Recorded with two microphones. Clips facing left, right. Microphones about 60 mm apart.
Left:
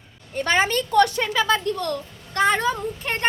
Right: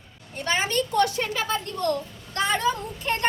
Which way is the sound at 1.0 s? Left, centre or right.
Left.